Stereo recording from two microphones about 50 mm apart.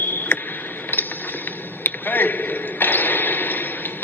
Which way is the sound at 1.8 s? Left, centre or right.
Left.